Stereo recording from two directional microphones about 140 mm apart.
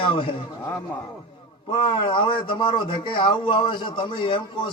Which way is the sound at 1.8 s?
35° left (ahead or behind).